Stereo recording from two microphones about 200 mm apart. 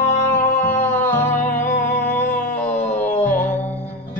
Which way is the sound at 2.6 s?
35° left (ahead or behind).